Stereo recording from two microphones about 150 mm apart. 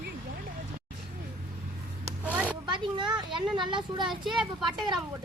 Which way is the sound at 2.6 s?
30° right (ahead or behind).